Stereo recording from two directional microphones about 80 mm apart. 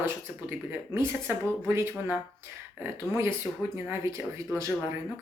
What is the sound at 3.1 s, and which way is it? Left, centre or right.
Speech, right.